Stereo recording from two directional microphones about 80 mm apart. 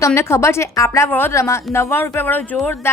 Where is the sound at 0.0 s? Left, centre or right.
Left.